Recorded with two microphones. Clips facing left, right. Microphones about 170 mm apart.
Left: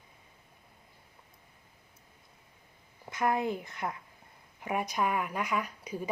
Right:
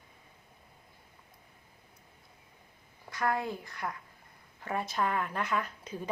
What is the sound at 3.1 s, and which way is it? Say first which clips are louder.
A woman's voice: left 2 dB; 20° left (ahead or behind).